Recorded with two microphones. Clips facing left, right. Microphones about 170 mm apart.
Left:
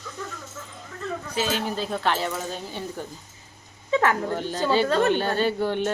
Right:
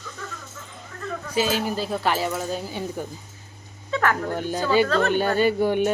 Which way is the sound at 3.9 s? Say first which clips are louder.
Left 2 dB; 20° left (ahead or behind).